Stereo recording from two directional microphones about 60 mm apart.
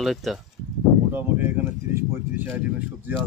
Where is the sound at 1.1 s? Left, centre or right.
Right.